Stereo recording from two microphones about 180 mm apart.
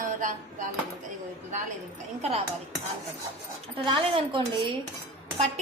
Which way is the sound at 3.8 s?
25° right (ahead or behind).